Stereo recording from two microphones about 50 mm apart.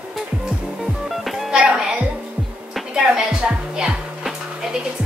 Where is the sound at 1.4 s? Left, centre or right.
Centre.